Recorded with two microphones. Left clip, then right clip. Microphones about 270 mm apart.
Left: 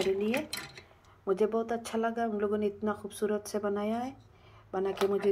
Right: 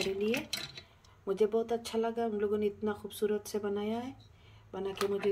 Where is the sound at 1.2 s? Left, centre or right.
Centre.